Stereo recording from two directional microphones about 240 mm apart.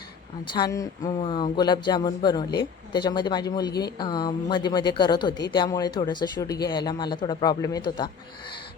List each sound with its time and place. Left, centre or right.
0.5 s a woman's voice: centre